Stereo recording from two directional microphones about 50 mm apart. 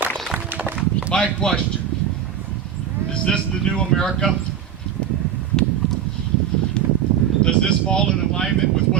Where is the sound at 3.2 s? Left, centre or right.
Centre.